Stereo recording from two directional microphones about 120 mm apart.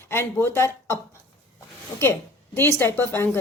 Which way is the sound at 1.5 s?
20° left (ahead or behind).